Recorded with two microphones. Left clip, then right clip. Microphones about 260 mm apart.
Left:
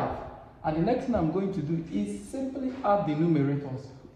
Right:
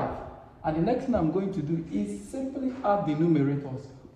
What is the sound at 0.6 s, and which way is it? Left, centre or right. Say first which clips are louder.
Speech: even; left.